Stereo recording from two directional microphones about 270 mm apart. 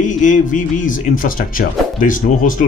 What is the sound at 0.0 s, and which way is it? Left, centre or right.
Speech, left.